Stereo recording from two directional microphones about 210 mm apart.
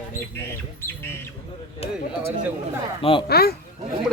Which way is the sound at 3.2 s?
50° left (ahead or behind).